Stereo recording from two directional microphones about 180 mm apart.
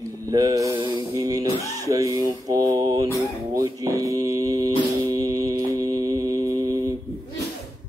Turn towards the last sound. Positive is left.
turn(degrees=-20)  # may be behind; listen again after turning